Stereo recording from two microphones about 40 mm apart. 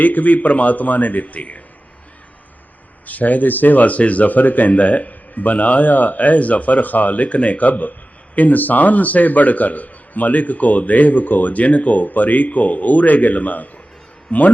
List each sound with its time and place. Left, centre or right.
0.0 s a man's voice: left
3.1 s a man's voice: left